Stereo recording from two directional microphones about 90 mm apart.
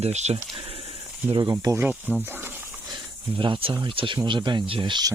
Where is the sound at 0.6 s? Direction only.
90° right.